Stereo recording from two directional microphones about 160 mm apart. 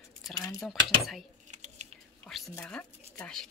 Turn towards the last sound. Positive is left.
turn(degrees=5)  # may be behind; listen again after turning